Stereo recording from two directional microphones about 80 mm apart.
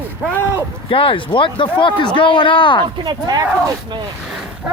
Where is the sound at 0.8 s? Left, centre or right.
Left.